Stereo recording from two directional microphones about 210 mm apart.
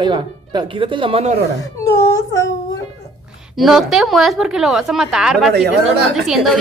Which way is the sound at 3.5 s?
Centre (ahead or behind).